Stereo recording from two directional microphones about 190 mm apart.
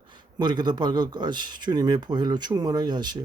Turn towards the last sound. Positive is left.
turn(degrees=-25)  # may be behind; listen again after turning